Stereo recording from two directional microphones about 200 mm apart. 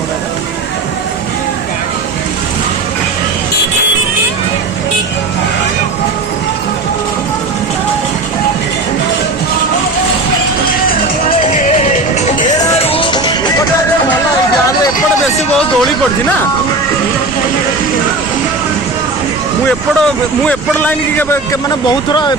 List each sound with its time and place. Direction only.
11.5 s music: 35° left (ahead or behind)
19.6 s vehicle: 5° left (ahead or behind)
21.8 s speech: 20° left (ahead or behind)